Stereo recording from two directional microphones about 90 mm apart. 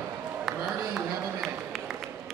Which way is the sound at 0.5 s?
5° right (ahead or behind).